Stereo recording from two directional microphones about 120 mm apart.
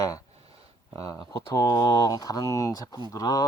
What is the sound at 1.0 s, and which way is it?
Speech, 30° left (ahead or behind).